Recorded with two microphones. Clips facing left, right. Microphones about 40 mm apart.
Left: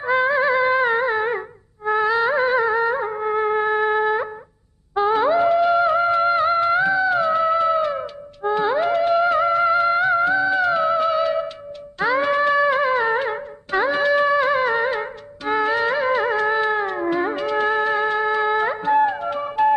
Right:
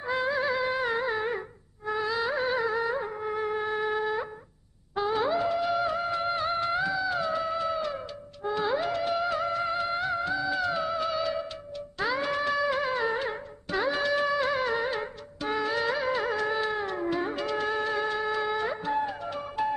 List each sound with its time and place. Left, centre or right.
0.0 s music: left